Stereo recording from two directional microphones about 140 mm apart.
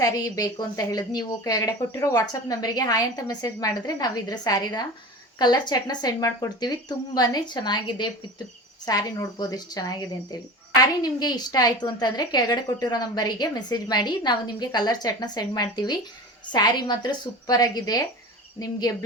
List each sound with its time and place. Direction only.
0.0 s a woman's voice: 25° left (ahead or behind)